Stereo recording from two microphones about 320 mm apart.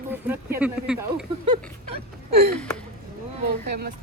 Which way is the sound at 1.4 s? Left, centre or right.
Centre.